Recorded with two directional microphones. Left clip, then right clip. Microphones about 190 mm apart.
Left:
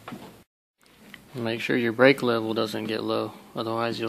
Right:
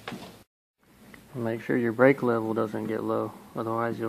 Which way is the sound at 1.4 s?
20° left (ahead or behind).